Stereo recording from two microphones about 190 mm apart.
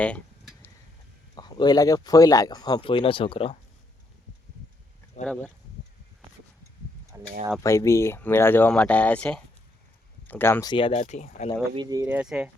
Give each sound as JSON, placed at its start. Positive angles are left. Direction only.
{"t": 0.0, "sound": "a sound", "side_deg": 5}
{"t": 1.4, "sound": "speech", "side_deg": 20}
{"t": 5.2, "sound": "speech", "side_deg": 35}
{"t": 7.1, "sound": "a sound", "side_deg": -15}
{"t": 7.6, "sound": "speech", "side_deg": 15}
{"t": 11.0, "sound": "speech", "side_deg": 40}
{"t": 11.7, "sound": "speech", "side_deg": -20}
{"t": 12.0, "sound": "speech", "side_deg": -5}